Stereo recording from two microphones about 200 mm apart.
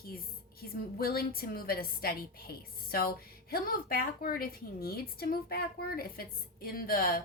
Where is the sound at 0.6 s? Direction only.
50° left (ahead or behind).